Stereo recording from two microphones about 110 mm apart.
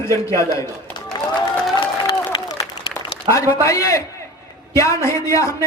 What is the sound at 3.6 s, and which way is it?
Speech, 30° left (ahead or behind).